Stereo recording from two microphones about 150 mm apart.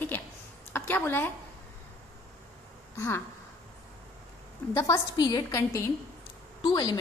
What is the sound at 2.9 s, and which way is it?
Speech, 20° left (ahead or behind).